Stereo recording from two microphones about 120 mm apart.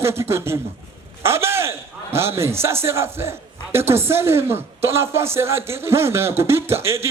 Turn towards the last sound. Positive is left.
turn(degrees=-20)  # may be behind; listen again after turning